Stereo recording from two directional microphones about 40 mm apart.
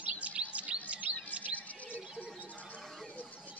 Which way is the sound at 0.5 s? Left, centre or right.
Right.